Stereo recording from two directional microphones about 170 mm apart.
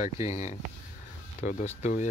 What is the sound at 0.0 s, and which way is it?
Speech, 45° left (ahead or behind).